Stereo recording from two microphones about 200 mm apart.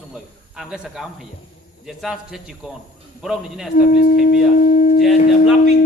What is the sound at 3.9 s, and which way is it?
Speech, 45° left (ahead or behind).